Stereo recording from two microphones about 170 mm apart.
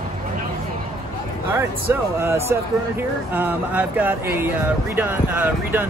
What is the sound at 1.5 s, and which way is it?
Speech, 15° right (ahead or behind).